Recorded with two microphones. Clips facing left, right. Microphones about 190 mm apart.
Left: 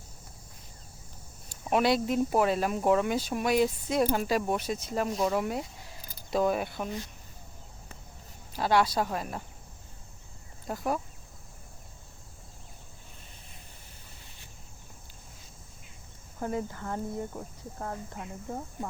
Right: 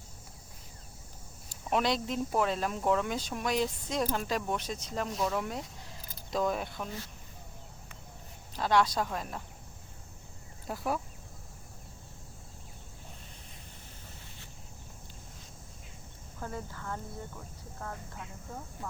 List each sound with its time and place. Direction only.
1.5 s speech: 5° left (ahead or behind)
8.5 s speech: 5° left (ahead or behind)
16.4 s speech: 20° left (ahead or behind)